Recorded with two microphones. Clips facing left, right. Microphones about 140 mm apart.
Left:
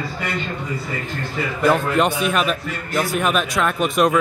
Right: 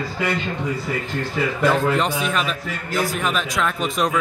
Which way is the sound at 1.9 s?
60° left (ahead or behind).